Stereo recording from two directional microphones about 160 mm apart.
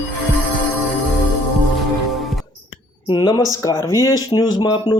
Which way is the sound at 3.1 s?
25° left (ahead or behind).